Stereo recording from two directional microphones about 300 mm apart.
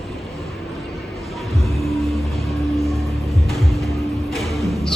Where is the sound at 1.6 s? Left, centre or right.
Centre.